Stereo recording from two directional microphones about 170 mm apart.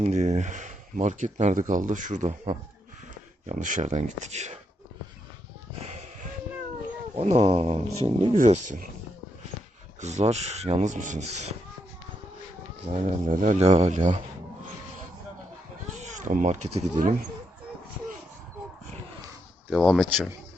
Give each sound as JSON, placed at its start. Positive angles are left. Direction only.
{"t": 0.0, "sound": "speech", "side_deg": -45}
{"t": 7.2, "sound": "speech", "side_deg": -40}
{"t": 10.0, "sound": "speech", "side_deg": -40}
{"t": 12.9, "sound": "speech", "side_deg": -50}
{"t": 16.0, "sound": "speech", "side_deg": -45}
{"t": 19.7, "sound": "speech", "side_deg": 0}